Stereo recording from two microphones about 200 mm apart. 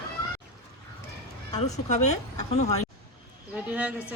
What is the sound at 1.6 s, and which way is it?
Speech, 35° left (ahead or behind).